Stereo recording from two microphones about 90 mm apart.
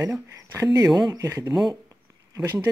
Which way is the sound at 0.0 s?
35° right (ahead or behind).